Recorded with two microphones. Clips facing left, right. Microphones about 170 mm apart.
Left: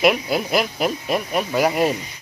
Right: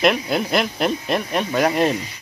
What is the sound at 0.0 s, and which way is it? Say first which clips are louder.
Speech: even; 5° left (ahead or behind).